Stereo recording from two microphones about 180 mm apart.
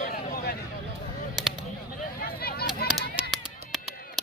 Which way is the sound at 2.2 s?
60° left (ahead or behind).